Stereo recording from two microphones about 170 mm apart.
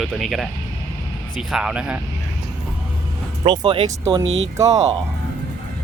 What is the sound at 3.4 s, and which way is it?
Speech, 30° right (ahead or behind).